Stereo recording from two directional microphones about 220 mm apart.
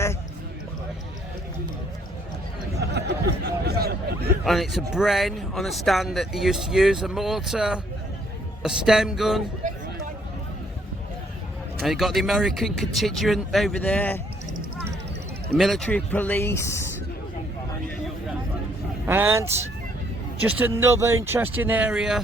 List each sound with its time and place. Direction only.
2.9 s a sound: 50° right (ahead or behind)
4.4 s speech: centre (ahead or behind)
9.6 s a sound: 35° right (ahead or behind)
11.8 s speech: centre (ahead or behind)
15.5 s speech: centre (ahead or behind)
19.0 s speech: 10° right (ahead or behind)